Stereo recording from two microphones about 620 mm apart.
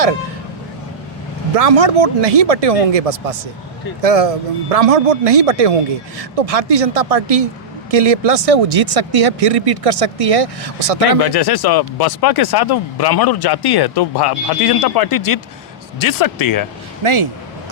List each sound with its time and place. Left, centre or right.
1.5 s speech: right
11.2 s speech: left
17.0 s a man's voice: right